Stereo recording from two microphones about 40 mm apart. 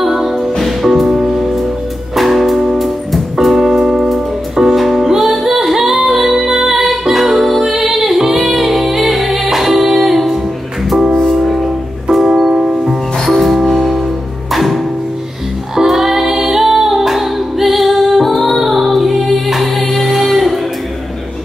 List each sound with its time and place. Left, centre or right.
0.0 s music: centre
13.2 s music: centre